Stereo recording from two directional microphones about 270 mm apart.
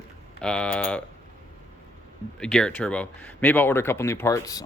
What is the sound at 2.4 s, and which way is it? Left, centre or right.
Speech, centre.